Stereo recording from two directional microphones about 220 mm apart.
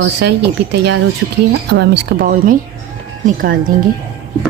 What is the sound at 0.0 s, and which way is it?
A woman's voice, 50° right (ahead or behind).